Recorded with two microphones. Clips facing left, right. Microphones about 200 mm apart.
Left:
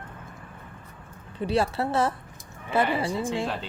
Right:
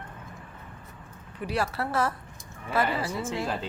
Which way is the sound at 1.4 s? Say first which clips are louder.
Left 5 dB; 30° left (ahead or behind).